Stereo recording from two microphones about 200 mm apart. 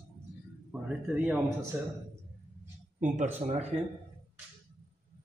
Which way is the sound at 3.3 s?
30° right (ahead or behind).